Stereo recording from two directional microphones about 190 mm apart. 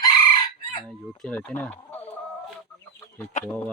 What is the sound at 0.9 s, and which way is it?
Speech, 5° left (ahead or behind).